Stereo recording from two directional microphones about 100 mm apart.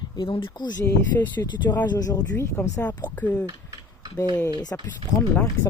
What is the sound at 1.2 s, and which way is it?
Speech, 25° left (ahead or behind).